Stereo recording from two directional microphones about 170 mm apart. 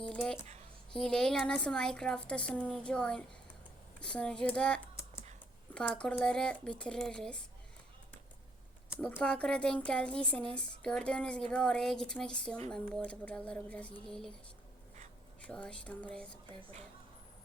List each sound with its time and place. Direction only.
0.0 s a sound: 5° left (ahead or behind)
0.9 s speech: 5° left (ahead or behind)
9.0 s speech: 5° left (ahead or behind)
15.4 s speech: 5° left (ahead or behind)